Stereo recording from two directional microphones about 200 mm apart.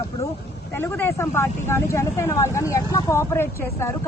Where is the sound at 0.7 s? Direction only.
10° left (ahead or behind).